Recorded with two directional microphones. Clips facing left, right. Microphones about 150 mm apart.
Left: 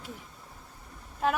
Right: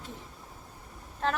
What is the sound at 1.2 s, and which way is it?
Female singing, 10° left (ahead or behind).